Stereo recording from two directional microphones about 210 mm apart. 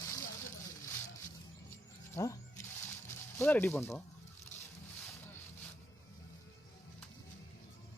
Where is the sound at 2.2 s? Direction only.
15° left (ahead or behind).